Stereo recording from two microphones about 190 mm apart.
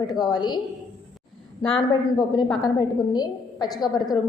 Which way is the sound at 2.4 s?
20° left (ahead or behind).